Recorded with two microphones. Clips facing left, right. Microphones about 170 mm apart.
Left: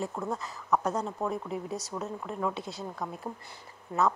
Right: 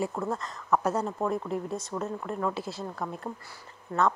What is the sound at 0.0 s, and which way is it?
Speech, 5° right (ahead or behind).